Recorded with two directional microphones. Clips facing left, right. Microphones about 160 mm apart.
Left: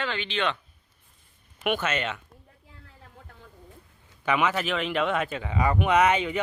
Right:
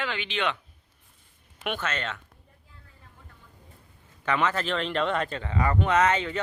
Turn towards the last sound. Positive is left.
turn(degrees=15)  # may be behind; listen again after turning